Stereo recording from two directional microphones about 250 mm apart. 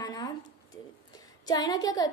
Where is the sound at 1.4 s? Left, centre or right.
Centre.